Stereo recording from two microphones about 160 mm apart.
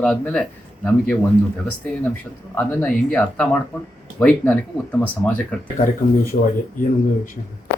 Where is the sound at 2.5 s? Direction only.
10° left (ahead or behind).